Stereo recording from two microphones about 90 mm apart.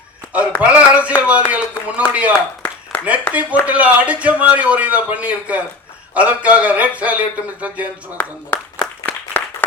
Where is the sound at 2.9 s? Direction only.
15° left (ahead or behind).